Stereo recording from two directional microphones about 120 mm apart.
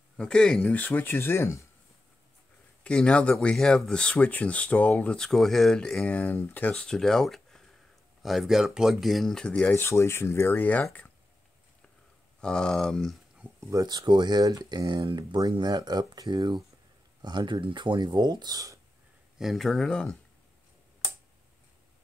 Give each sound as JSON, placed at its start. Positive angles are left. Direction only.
{"t": 0.2, "sound": "speech", "side_deg": 5}
{"t": 2.8, "sound": "speech", "side_deg": 10}
{"t": 6.7, "sound": "speech", "side_deg": 5}
{"t": 12.4, "sound": "speech", "side_deg": 5}
{"t": 13.7, "sound": "speech", "side_deg": -30}
{"t": 19.3, "sound": "speech", "side_deg": 0}